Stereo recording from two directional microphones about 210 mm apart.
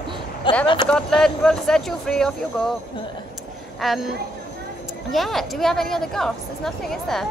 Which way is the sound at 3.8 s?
Centre (ahead or behind).